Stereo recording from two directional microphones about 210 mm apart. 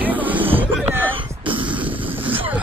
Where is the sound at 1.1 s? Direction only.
25° right (ahead or behind).